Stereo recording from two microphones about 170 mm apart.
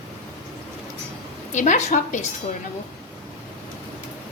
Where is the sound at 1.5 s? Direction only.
45° left (ahead or behind).